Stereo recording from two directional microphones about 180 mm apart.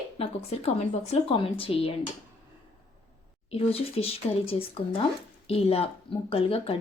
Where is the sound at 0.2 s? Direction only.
35° left (ahead or behind).